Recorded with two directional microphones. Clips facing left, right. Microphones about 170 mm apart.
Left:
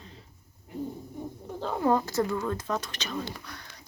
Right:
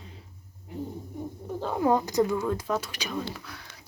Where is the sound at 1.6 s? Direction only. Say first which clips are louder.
Right 1 dB; 10° right (ahead or behind).